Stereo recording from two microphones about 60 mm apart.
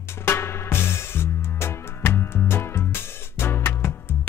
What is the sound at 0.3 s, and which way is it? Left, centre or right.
Music, left.